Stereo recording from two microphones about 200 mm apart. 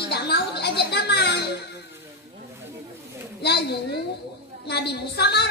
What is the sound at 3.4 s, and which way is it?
A woman's voice, 55° left (ahead or behind).